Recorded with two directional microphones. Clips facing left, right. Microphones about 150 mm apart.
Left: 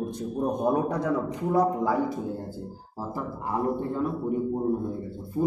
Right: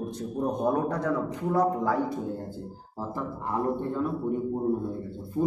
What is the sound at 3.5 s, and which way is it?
A man's voice, 5° left (ahead or behind).